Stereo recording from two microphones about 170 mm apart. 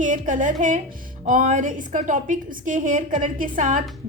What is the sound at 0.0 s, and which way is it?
A woman's voice, 50° right (ahead or behind).